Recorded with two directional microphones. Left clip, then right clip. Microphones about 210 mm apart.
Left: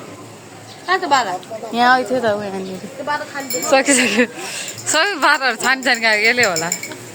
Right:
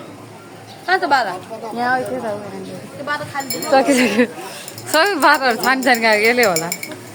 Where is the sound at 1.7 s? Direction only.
25° left (ahead or behind).